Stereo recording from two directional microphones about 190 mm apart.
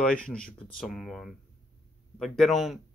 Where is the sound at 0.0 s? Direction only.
5° left (ahead or behind).